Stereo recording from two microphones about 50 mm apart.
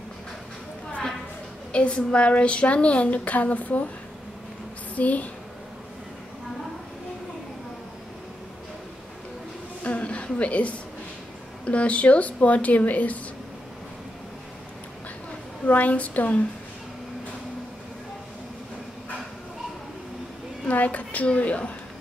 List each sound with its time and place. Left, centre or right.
1.7 s a woman's voice: left
4.9 s speech: left
9.8 s a sound: left
11.6 s a woman's voice: left
15.6 s speech: left
20.6 s a woman's voice: left